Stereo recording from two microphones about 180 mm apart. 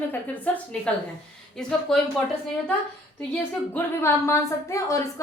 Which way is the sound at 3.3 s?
10° left (ahead or behind).